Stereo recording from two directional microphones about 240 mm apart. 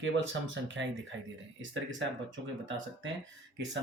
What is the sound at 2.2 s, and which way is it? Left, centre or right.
Speech, right.